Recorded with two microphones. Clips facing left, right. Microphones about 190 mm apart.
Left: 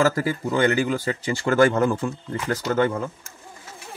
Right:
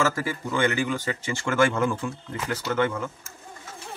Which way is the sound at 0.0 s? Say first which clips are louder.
Left 5 dB; 40° left (ahead or behind).